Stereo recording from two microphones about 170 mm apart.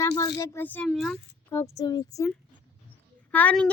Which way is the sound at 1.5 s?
15° left (ahead or behind).